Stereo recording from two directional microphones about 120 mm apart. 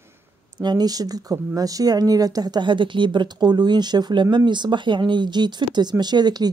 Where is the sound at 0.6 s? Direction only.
35° right (ahead or behind).